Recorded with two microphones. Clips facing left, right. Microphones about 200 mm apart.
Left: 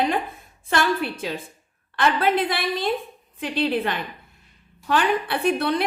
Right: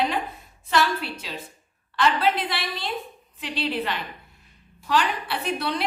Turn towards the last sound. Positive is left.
turn(degrees=50)  # may be behind; listen again after turning